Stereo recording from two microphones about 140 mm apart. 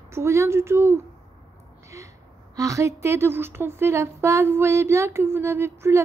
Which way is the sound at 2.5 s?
25° right (ahead or behind).